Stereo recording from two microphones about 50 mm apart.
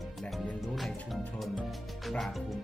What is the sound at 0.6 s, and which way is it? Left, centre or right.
Speech, centre.